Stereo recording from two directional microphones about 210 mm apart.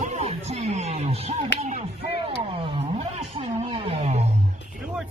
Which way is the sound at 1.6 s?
30° right (ahead or behind).